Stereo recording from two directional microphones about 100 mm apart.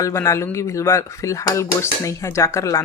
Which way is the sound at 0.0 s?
30° left (ahead or behind).